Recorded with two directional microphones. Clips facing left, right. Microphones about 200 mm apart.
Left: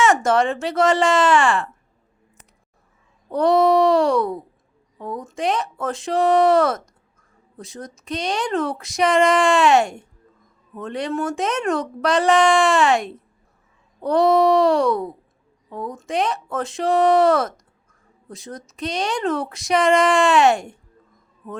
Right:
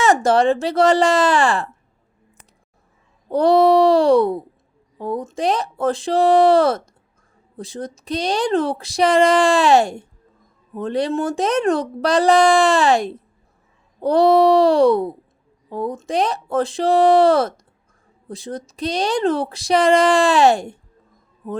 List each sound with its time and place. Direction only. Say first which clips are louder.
0.0 s speech: right 2 dB; 35° right (ahead or behind)
3.2 s speech: right 3 dB; 35° right (ahead or behind)